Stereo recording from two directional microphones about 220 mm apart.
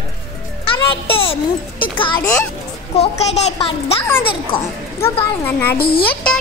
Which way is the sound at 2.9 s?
30° left (ahead or behind).